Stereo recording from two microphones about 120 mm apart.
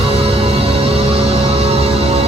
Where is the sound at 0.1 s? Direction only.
55° right (ahead or behind).